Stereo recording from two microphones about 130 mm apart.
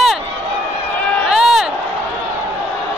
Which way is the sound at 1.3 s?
5° right (ahead or behind).